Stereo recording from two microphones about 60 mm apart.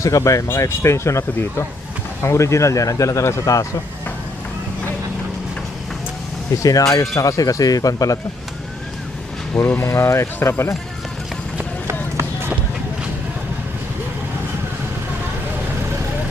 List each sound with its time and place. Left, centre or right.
0.0 s speech: left
0.4 s speech: left
3.4 s speech: left
6.6 s speech: left
9.6 s speech: left
9.9 s speech: left
11.9 s run: right